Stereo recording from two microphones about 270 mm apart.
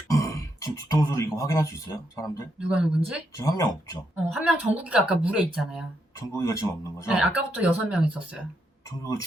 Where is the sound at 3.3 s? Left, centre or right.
Centre.